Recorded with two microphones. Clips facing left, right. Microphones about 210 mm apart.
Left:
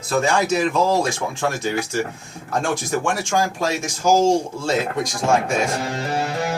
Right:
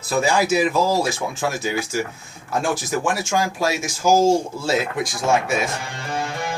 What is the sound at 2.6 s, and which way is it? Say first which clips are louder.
Speech: even; 5° right (ahead or behind).